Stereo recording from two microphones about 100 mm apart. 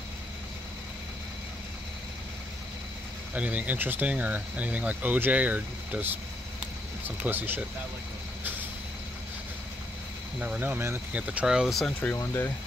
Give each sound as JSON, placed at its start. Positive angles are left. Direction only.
{"t": 3.3, "sound": "speech", "side_deg": -15}
{"t": 7.2, "sound": "speech", "side_deg": -20}
{"t": 10.4, "sound": "speech", "side_deg": -15}
{"t": 11.1, "sound": "speech", "side_deg": -15}
{"t": 12.0, "sound": "speech", "side_deg": 20}